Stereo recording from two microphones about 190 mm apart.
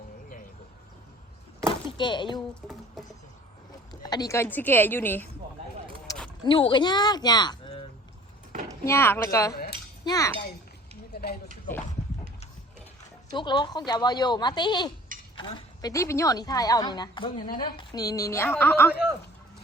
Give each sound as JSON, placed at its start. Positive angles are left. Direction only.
{"t": 2.0, "sound": "a woman's voice", "side_deg": 25}
{"t": 4.0, "sound": "a woman's voice", "side_deg": 20}
{"t": 6.4, "sound": "a woman's voice", "side_deg": 25}
{"t": 8.8, "sound": "a woman's voice", "side_deg": 15}
{"t": 11.1, "sound": "a sound", "side_deg": 55}
{"t": 13.3, "sound": "a woman's voice", "side_deg": 25}